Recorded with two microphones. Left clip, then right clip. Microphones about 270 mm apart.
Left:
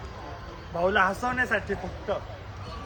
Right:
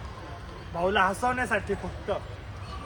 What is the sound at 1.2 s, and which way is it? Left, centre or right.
Speech, centre.